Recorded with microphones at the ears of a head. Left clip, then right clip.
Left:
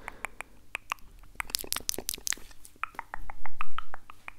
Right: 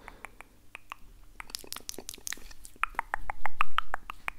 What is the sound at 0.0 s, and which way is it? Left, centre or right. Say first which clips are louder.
Finger snapping: left 7 dB; left.